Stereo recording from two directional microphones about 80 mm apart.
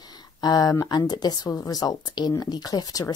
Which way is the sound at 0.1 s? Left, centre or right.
Left.